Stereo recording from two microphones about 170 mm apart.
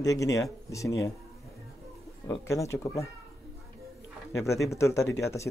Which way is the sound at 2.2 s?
15° left (ahead or behind).